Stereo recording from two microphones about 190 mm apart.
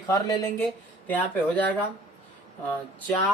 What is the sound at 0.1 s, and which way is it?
Speech, 20° left (ahead or behind).